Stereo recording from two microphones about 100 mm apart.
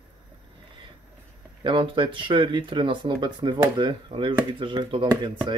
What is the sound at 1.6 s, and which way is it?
Speech, 55° right (ahead or behind).